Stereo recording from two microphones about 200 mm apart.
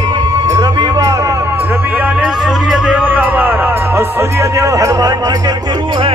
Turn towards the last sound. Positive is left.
turn(degrees=-25)  # may be behind; listen again after turning